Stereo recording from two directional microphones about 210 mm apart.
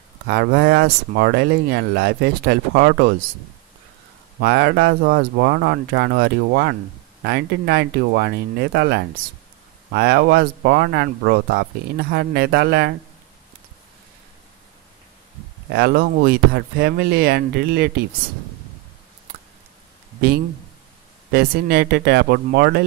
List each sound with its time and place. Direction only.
0.3 s speech: 50° right (ahead or behind)
4.4 s speech: 50° right (ahead or behind)
15.7 s speech: 45° right (ahead or behind)
21.3 s speech: 50° right (ahead or behind)